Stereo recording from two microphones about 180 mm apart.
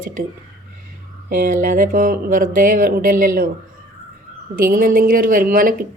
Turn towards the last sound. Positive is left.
turn(degrees=-50)  # may be behind; listen again after turning